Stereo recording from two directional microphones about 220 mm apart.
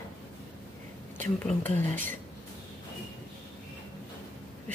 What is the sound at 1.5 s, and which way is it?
Speech, 10° left (ahead or behind).